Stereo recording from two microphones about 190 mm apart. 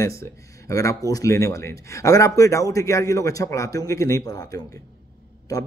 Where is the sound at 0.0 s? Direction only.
15° left (ahead or behind).